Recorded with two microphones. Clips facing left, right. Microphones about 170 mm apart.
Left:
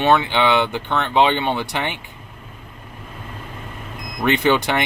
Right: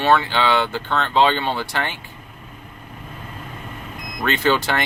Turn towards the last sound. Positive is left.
turn(degrees=15)  # may be behind; listen again after turning